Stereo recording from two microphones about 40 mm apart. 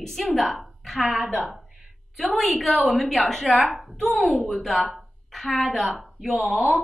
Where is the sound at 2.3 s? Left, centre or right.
Centre.